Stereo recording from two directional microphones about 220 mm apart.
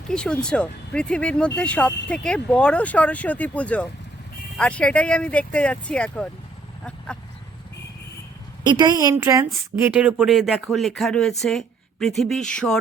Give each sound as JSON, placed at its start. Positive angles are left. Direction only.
{"t": 0.1, "sound": "speech", "side_deg": 5}
{"t": 8.6, "sound": "a woman's voice", "side_deg": -20}